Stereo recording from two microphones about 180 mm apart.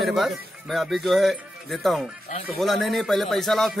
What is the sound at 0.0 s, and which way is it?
Speech, centre (ahead or behind).